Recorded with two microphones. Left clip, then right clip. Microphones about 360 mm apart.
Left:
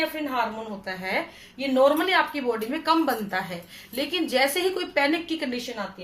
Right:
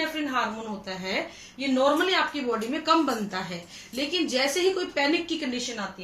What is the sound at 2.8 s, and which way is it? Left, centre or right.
A woman's voice, centre.